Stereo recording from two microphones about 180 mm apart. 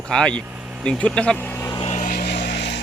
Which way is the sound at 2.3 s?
70° left (ahead or behind).